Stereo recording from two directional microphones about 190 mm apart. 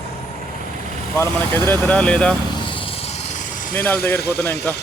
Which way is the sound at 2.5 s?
25° left (ahead or behind).